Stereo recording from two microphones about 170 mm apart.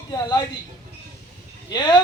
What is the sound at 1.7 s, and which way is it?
Speech, 25° left (ahead or behind).